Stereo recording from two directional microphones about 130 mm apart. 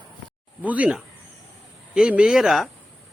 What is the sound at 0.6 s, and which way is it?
Speech, 10° right (ahead or behind).